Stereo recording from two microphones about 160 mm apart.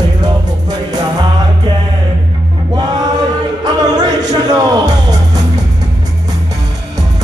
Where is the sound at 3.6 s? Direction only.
25° right (ahead or behind).